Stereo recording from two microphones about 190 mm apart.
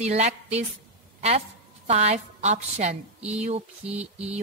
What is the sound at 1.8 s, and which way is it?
A woman's voice, 35° right (ahead or behind).